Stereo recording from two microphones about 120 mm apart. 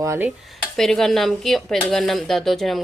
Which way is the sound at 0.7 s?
5° left (ahead or behind).